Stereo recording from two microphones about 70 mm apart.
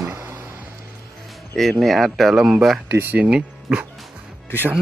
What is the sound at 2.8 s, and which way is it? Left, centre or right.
Speech, right.